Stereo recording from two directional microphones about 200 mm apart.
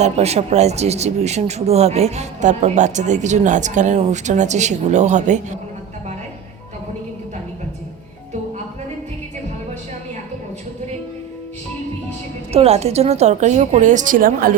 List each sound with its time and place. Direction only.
0.0 s speech: 35° right (ahead or behind)
12.5 s speech: 30° right (ahead or behind)